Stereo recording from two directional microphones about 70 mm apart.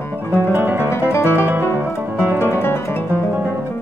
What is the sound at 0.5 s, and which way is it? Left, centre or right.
Music, right.